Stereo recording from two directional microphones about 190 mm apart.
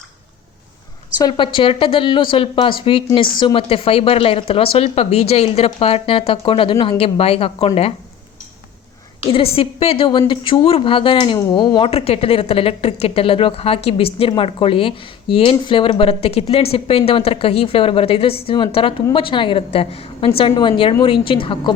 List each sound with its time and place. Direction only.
1.2 s a woman's voice: 25° left (ahead or behind)
9.2 s a woman's voice: 30° left (ahead or behind)